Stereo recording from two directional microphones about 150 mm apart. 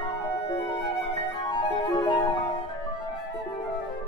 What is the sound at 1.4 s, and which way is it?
Music, 30° left (ahead or behind).